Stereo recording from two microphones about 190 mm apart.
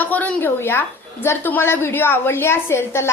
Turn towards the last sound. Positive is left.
turn(degrees=15)  # may be behind; listen again after turning